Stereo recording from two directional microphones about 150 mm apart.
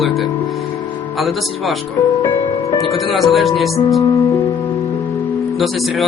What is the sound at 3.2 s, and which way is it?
Speech, centre (ahead or behind).